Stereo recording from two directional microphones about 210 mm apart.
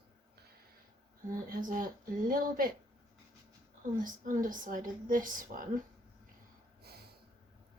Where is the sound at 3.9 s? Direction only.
40° right (ahead or behind).